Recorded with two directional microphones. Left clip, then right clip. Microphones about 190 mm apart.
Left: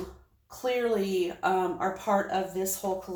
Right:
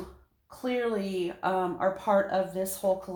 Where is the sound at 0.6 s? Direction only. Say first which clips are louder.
Left 2 dB; 30° right (ahead or behind).